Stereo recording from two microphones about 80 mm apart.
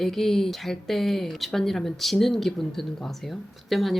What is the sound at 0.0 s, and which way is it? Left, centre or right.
Speech, centre.